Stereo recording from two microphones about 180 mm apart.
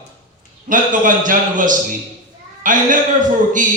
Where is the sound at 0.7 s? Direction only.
45° right (ahead or behind).